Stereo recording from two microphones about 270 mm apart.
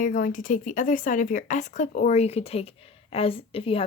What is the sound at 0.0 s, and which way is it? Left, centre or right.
A woman's voice, left.